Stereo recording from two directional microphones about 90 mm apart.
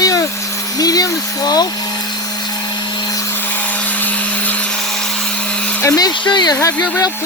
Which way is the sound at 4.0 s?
20° left (ahead or behind).